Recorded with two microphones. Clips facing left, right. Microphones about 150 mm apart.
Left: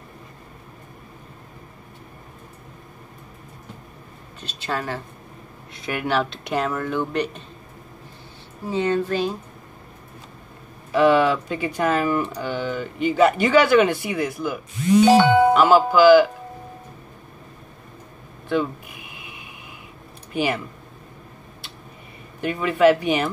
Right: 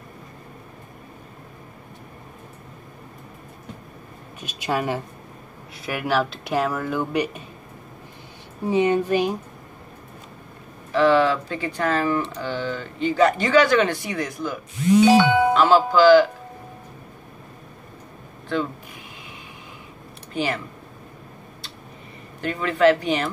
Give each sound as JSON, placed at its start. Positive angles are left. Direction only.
{"t": 4.4, "sound": "speech", "side_deg": -15}
{"t": 5.7, "sound": "speech", "side_deg": 0}
{"t": 8.6, "sound": "speech", "side_deg": -15}
{"t": 10.9, "sound": "speech", "side_deg": 15}
{"t": 15.0, "sound": "speech", "side_deg": 40}
{"t": 15.5, "sound": "speech", "side_deg": 15}
{"t": 18.5, "sound": "speech", "side_deg": 15}
{"t": 20.3, "sound": "speech", "side_deg": 10}
{"t": 22.4, "sound": "speech", "side_deg": 15}